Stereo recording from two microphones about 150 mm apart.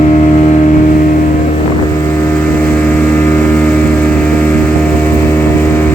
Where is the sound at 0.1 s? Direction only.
55° left (ahead or behind).